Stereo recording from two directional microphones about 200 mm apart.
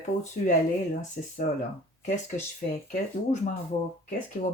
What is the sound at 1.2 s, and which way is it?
Speech, 45° left (ahead or behind).